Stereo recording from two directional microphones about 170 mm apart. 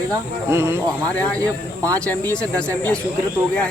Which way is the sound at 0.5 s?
15° right (ahead or behind).